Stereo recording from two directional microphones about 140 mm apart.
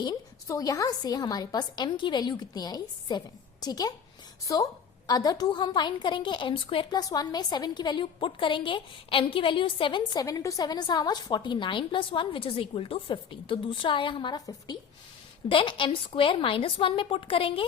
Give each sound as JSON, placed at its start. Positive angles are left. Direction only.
{"t": 0.0, "sound": "a woman's voice", "side_deg": 30}
{"t": 7.0, "sound": "a woman's voice", "side_deg": 25}
{"t": 15.4, "sound": "a woman's voice", "side_deg": 35}